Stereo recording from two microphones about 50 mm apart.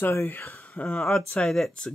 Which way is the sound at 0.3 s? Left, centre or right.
Left.